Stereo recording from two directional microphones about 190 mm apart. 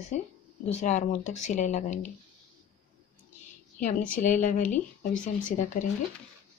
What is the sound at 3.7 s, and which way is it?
A woman's voice, 40° left (ahead or behind).